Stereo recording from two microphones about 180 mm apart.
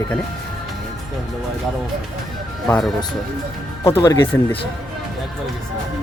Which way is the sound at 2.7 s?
5° left (ahead or behind).